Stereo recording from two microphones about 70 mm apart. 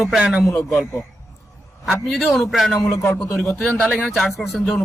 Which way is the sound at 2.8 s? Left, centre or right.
Left.